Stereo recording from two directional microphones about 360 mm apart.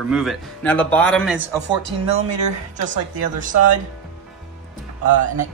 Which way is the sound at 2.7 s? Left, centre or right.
Right.